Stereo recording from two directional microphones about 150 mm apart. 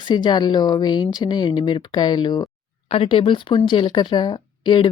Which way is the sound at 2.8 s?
40° left (ahead or behind).